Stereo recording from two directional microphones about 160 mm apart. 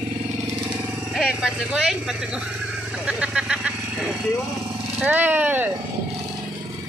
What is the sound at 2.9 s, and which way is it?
Vehicle, 5° right (ahead or behind).